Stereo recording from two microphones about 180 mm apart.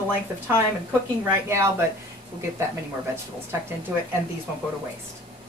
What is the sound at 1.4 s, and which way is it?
Speech, 15° right (ahead or behind).